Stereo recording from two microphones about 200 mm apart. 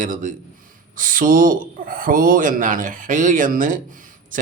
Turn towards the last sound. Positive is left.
turn(degrees=-40)  # may be behind; listen again after turning